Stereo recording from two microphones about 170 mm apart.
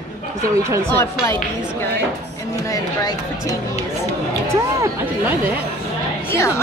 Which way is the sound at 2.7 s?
20° left (ahead or behind).